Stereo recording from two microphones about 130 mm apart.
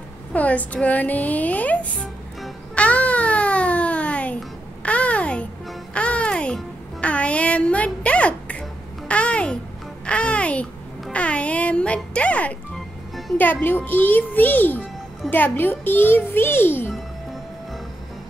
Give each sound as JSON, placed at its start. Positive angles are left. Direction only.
{"t": 0.3, "sound": "speech", "side_deg": 10}
{"t": 2.4, "sound": "music", "side_deg": 10}
{"t": 10.0, "sound": "babbling", "side_deg": 10}
{"t": 13.4, "sound": "speech", "side_deg": 15}